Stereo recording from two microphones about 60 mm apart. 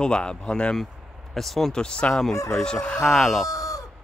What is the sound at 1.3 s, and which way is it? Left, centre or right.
Speech, centre.